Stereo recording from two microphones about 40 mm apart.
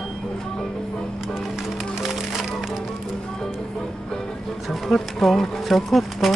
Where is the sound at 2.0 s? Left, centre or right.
Centre.